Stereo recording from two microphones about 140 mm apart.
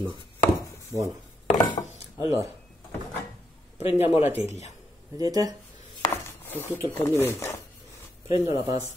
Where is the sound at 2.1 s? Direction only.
20° right (ahead or behind).